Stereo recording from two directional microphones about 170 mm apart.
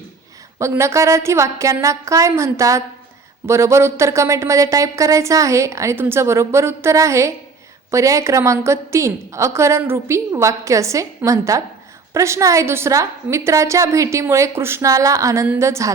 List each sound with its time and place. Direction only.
0.6 s speech: 15° right (ahead or behind)